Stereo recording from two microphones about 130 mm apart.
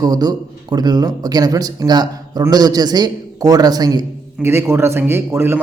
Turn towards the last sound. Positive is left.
turn(degrees=-20)  # may be behind; listen again after turning